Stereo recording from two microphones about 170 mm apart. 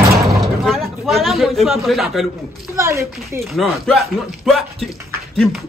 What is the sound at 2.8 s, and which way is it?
Speech, 15° right (ahead or behind).